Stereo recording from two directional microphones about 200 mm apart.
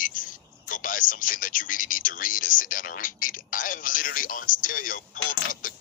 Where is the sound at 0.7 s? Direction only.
45° left (ahead or behind).